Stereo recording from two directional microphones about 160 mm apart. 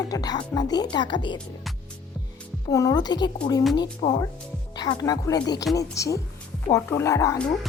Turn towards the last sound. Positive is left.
turn(degrees=20)  # may be behind; listen again after turning